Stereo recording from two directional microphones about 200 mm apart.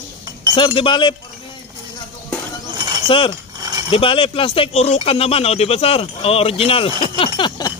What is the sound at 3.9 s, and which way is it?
Speech, 25° left (ahead or behind).